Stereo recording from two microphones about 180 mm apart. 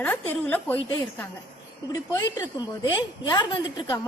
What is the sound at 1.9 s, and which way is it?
A woman's voice, 20° left (ahead or behind).